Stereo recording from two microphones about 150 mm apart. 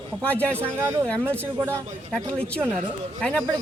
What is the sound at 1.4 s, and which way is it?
Speech, 15° right (ahead or behind).